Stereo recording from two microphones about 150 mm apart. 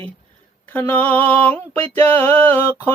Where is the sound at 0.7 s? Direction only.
10° left (ahead or behind).